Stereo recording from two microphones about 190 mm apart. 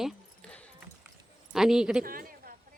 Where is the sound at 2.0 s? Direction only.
50° right (ahead or behind).